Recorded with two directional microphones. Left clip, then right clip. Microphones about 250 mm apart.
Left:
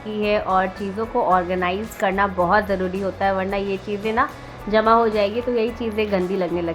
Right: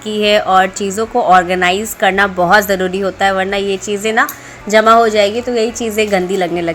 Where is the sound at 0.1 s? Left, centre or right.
Centre.